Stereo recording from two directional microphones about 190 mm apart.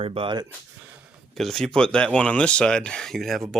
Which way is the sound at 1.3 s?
Centre (ahead or behind).